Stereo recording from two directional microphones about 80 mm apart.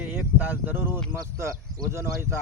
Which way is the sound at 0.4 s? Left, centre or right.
Right.